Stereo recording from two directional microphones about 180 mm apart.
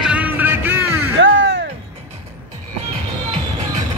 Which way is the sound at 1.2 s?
90° right.